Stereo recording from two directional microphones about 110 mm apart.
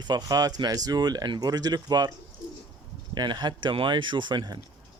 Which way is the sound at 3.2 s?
40° right (ahead or behind).